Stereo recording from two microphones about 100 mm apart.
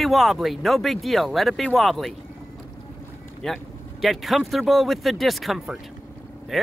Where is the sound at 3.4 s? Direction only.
5° left (ahead or behind).